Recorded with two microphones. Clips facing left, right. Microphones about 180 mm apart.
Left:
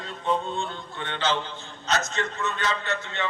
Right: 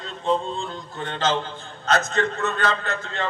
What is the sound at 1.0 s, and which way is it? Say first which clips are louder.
Speech: right 3 dB; 40° right (ahead or behind).